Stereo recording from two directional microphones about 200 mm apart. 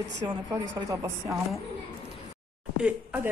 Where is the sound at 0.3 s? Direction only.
25° right (ahead or behind).